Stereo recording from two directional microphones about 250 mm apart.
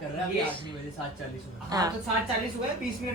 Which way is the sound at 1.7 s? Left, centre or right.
Centre.